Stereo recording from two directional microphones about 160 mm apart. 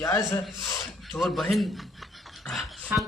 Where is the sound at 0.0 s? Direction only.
20° left (ahead or behind).